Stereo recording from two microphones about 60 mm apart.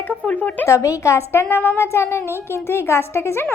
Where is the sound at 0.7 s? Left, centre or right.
Left.